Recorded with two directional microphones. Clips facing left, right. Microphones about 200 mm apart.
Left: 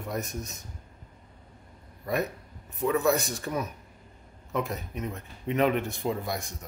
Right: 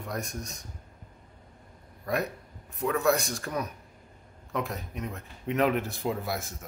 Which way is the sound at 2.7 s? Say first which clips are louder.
Left 1 dB; centre (ahead or behind).